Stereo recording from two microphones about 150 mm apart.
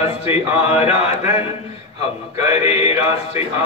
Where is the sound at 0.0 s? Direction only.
40° left (ahead or behind).